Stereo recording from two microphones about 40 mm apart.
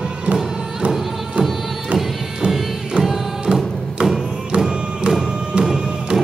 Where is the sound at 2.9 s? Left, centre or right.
Right.